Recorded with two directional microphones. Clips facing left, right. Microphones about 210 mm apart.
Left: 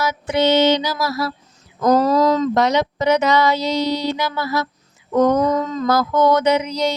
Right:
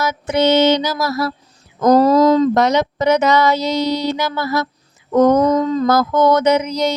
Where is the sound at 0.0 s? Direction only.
45° right (ahead or behind).